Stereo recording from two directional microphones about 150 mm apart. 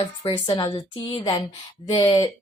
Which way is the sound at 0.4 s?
35° left (ahead or behind).